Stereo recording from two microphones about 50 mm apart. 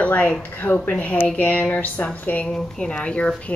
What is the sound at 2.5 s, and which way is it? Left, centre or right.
Speech, centre.